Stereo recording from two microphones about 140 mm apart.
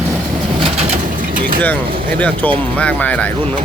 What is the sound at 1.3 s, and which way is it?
Vehicle, 90° right.